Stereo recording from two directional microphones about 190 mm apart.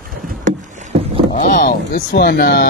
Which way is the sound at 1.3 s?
45° left (ahead or behind).